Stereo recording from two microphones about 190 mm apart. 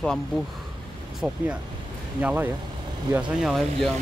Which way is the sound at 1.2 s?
5° right (ahead or behind).